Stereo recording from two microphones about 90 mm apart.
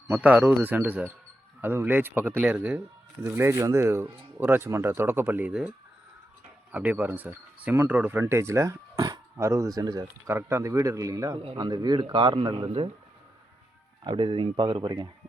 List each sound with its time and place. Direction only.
0.1 s speech: 15° right (ahead or behind)
6.7 s speech: 15° right (ahead or behind)
8.2 s speech: 30° right (ahead or behind)
9.4 s speech: 35° right (ahead or behind)
10.2 s speech: 30° right (ahead or behind)
11.5 s a man's voice: 50° right (ahead or behind)
14.0 s speech: 65° right (ahead or behind)